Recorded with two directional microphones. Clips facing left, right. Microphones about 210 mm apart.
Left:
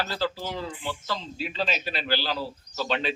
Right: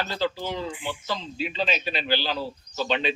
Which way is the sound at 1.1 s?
25° right (ahead or behind).